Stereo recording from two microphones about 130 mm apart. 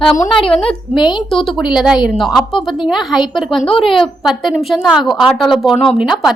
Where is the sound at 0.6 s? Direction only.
35° left (ahead or behind).